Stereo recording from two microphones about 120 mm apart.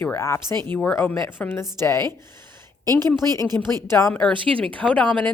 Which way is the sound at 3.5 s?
20° left (ahead or behind).